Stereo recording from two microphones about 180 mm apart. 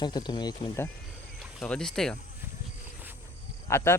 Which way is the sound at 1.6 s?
5° left (ahead or behind).